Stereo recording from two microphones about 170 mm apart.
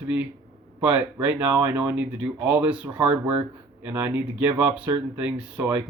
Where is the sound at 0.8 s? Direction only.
10° right (ahead or behind).